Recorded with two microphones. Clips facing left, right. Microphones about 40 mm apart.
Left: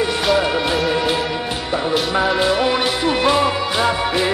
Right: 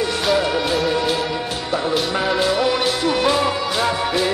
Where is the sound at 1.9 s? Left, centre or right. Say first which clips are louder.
Left 3 dB; centre.